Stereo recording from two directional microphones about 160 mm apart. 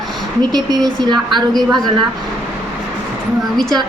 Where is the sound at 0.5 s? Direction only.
25° right (ahead or behind).